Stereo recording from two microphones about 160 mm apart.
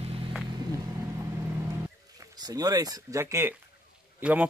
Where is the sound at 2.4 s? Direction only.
20° right (ahead or behind).